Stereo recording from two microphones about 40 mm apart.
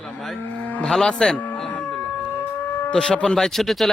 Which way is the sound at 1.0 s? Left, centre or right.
Centre.